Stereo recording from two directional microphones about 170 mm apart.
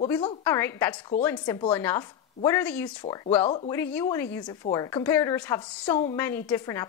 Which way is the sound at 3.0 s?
25° left (ahead or behind).